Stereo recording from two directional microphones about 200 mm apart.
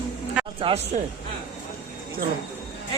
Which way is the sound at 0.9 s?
35° right (ahead or behind).